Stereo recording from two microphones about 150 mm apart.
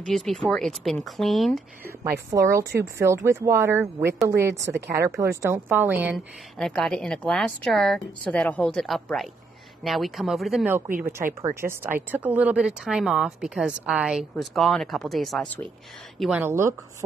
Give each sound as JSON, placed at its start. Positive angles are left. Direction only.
{"t": 0.1, "sound": "a woman's voice", "side_deg": 0}
{"t": 2.3, "sound": "a woman's voice", "side_deg": -20}
{"t": 6.6, "sound": "a woman's voice", "side_deg": 5}
{"t": 11.4, "sound": "a woman's voice", "side_deg": -15}
{"t": 16.2, "sound": "a woman's voice", "side_deg": -5}
{"t": 16.4, "sound": "speech", "side_deg": -15}